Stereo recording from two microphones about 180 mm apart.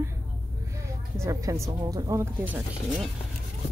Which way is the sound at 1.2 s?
15° right (ahead or behind).